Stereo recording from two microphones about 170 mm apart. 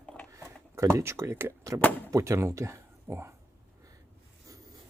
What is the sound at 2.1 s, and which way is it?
Speech, 20° right (ahead or behind).